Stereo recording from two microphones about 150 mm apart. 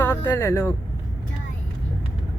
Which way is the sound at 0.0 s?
15° left (ahead or behind).